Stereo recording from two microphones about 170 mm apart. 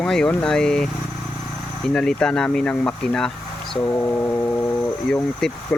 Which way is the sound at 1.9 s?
5° left (ahead or behind).